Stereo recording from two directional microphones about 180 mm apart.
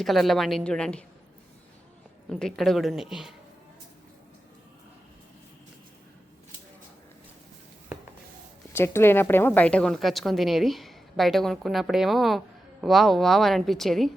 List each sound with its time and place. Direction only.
0.0 s a woman's voice: centre (ahead or behind)
2.3 s a woman's voice: centre (ahead or behind)
8.7 s a woman's voice: 15° left (ahead or behind)